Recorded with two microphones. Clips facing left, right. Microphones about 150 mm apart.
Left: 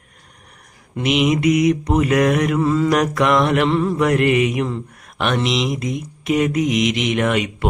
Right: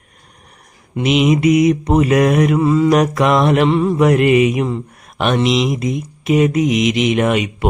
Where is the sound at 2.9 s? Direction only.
20° right (ahead or behind).